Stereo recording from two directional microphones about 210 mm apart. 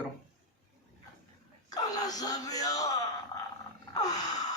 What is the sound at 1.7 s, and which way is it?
Wail, 20° left (ahead or behind).